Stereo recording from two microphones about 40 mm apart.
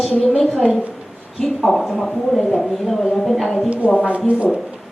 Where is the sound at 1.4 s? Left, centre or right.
Centre.